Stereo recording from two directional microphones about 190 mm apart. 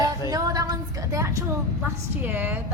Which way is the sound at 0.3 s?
20° right (ahead or behind).